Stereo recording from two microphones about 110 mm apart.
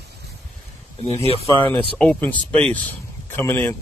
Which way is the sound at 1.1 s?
65° right (ahead or behind).